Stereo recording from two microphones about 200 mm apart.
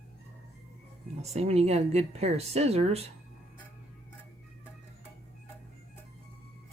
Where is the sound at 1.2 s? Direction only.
30° right (ahead or behind).